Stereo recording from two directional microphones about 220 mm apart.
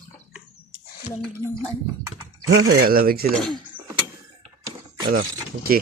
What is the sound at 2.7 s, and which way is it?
Speech, 40° right (ahead or behind).